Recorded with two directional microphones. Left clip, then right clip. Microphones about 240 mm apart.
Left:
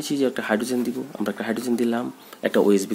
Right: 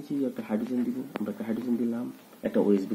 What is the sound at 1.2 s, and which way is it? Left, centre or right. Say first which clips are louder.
Speech: left 9 dB; left.